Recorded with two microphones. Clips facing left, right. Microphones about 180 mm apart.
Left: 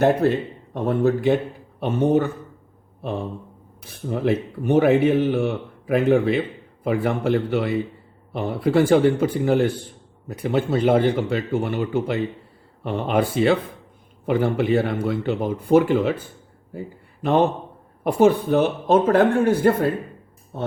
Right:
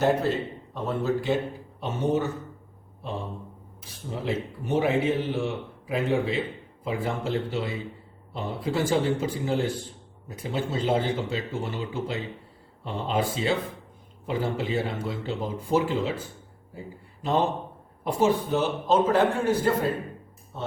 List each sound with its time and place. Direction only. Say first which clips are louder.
0.0 s speech: left 5 dB; 55° left (ahead or behind)
3.0 s mantra: left 6 dB; 60° left (ahead or behind)
3.8 s speech: left 8 dB; 60° left (ahead or behind)
18.0 s speech: left 7 dB; 60° left (ahead or behind)